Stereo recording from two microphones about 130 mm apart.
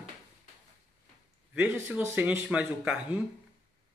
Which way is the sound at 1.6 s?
10° right (ahead or behind).